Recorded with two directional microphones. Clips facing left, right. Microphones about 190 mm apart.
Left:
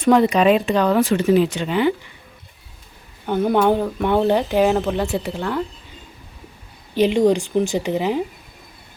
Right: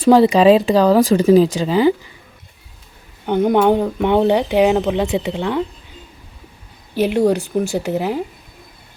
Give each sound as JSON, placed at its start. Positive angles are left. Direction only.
{"t": 0.0, "sound": "speech", "side_deg": -30}
{"t": 3.2, "sound": "speech", "side_deg": -20}
{"t": 6.9, "sound": "speech", "side_deg": -10}